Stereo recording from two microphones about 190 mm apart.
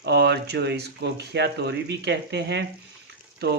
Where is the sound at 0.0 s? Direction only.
60° right (ahead or behind).